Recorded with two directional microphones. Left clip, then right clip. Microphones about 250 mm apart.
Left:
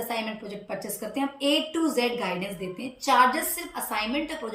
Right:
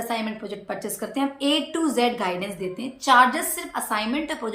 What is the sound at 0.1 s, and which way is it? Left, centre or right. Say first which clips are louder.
A woman's voice: right 3 dB; centre.